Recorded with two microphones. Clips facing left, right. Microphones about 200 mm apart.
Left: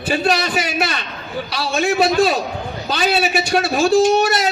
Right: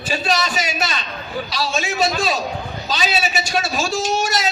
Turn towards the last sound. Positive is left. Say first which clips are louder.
# left 7 dB
turn(degrees=60)  # may be behind; listen again after turning